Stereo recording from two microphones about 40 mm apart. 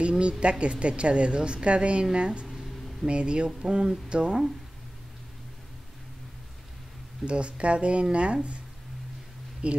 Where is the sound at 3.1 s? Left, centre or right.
Right.